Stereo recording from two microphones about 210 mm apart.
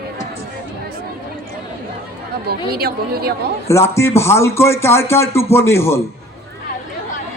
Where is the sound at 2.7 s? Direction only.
50° right (ahead or behind).